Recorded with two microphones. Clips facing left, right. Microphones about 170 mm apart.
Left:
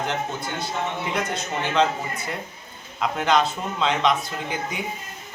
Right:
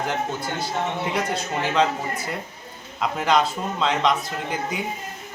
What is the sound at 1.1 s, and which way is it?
Speech, centre (ahead or behind).